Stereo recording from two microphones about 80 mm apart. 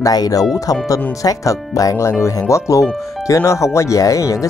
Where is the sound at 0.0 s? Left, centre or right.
Left.